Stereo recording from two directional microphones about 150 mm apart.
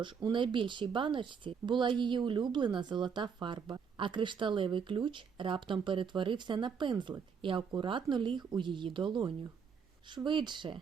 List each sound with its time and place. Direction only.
0.0 s speech: 30° right (ahead or behind)